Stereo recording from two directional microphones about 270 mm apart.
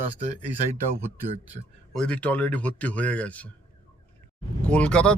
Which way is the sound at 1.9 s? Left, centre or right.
Centre.